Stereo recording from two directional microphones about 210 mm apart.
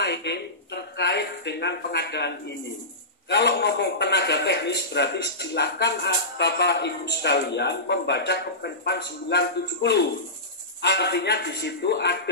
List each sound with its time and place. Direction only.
0.0 s a man's voice: 55° left (ahead or behind)